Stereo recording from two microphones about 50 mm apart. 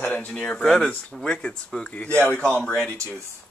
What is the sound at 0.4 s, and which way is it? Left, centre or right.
A man's voice, centre.